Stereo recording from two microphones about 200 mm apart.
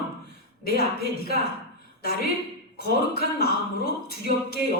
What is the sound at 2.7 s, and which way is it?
A man's voice, 50° left (ahead or behind).